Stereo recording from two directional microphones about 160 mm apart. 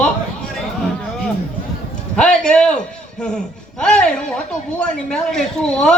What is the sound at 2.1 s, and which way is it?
A man's voice, 5° left (ahead or behind).